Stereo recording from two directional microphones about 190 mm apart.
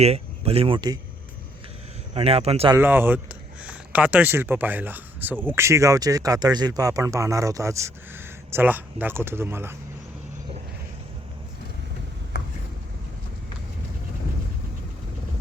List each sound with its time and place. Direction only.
0.0 s speech: 35° right (ahead or behind)
2.1 s speech: 30° right (ahead or behind)
2.7 s speech: 10° right (ahead or behind)